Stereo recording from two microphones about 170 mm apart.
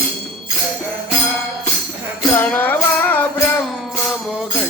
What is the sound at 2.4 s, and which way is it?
Music, 10° left (ahead or behind).